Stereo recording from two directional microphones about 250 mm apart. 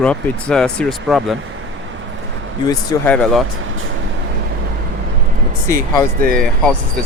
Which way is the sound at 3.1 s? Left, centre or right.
Centre.